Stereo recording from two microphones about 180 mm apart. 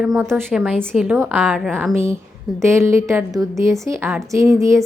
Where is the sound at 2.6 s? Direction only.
15° right (ahead or behind).